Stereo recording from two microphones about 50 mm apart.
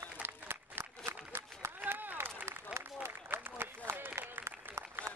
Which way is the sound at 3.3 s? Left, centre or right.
Right.